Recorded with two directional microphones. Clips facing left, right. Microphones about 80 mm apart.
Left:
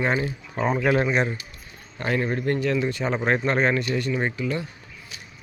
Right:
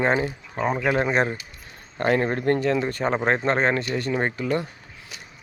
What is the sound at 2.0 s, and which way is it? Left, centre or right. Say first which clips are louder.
Speech: right 3 dB; right.